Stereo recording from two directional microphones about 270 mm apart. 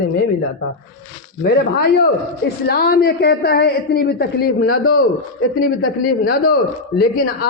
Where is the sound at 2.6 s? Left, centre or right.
Left.